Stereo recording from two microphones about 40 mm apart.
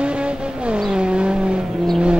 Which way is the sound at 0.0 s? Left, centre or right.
Right.